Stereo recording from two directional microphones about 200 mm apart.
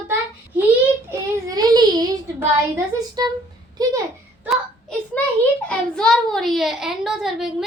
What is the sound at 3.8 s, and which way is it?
Speech, 20° right (ahead or behind).